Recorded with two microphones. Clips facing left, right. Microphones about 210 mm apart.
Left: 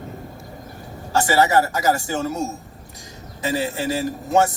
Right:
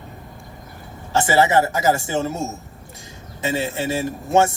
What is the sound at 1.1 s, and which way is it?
A man's voice, 20° right (ahead or behind).